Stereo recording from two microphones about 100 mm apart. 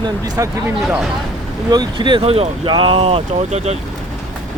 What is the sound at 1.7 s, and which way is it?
Speech, 45° right (ahead or behind).